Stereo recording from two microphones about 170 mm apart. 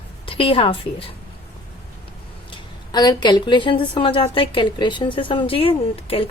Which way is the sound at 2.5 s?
25° left (ahead or behind).